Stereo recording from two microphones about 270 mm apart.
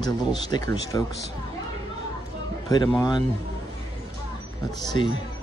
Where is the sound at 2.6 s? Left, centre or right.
Centre.